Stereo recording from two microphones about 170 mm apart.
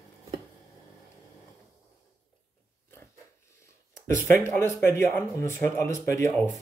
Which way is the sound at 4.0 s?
50° right (ahead or behind).